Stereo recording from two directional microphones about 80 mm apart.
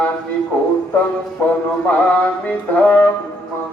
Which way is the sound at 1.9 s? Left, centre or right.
Centre.